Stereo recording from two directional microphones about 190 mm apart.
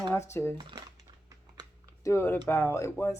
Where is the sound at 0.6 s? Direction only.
25° right (ahead or behind).